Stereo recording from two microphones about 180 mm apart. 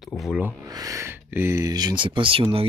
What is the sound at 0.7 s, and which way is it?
Speech, 20° right (ahead or behind).